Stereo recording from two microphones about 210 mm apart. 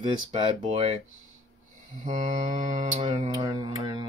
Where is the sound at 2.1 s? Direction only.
35° right (ahead or behind).